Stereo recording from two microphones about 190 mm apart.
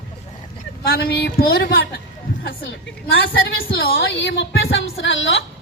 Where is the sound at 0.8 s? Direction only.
55° left (ahead or behind).